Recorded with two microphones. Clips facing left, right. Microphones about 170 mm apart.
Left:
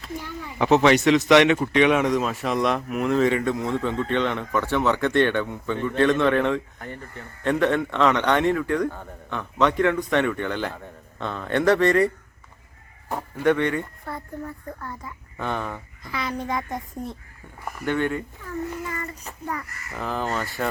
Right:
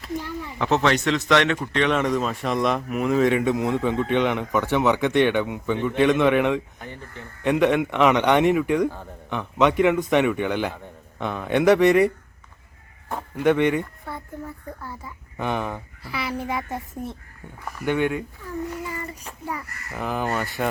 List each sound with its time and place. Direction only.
0.6 s speech: 10° left (ahead or behind)
3.3 s a man's voice: 15° right (ahead or behind)
13.1 s a sound: 10° left (ahead or behind)
13.4 s a man's voice: 15° right (ahead or behind)
14.0 s a man's voice: centre (ahead or behind)